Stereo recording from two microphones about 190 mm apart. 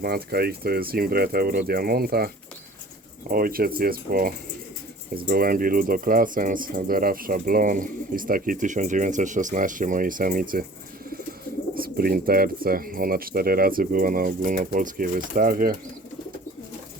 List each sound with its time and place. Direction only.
0.0 s speech: 55° right (ahead or behind)
11.7 s speech: 50° right (ahead or behind)